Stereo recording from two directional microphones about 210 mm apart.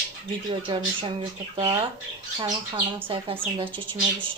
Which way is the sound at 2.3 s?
20° right (ahead or behind).